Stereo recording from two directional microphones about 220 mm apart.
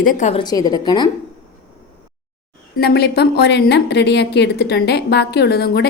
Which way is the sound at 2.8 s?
45° left (ahead or behind).